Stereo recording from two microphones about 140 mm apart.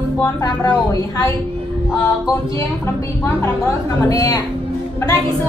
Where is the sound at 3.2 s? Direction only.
20° left (ahead or behind).